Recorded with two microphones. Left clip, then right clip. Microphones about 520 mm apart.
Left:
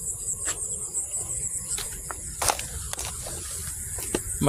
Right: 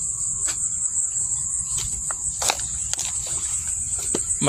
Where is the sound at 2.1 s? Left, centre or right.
Left.